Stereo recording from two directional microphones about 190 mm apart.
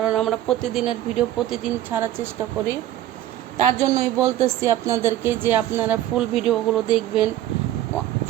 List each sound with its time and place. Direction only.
0.0 s speech: centre (ahead or behind)
3.8 s speech: 15° right (ahead or behind)